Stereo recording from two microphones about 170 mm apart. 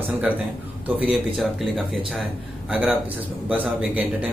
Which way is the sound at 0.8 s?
10° right (ahead or behind).